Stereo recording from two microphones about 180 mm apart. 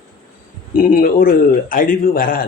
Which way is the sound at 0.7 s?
50° left (ahead or behind).